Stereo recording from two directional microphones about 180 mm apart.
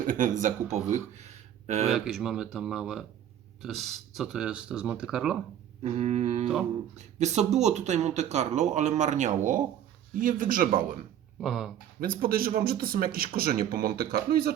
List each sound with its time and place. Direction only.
0.0 s speech: 45° right (ahead or behind)
1.9 s speech: centre (ahead or behind)
5.8 s a man's voice: 40° right (ahead or behind)
11.3 s speech: centre (ahead or behind)
11.9 s a man's voice: 55° right (ahead or behind)